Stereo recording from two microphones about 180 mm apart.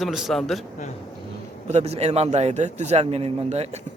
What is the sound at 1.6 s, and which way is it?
A man's voice, 35° right (ahead or behind).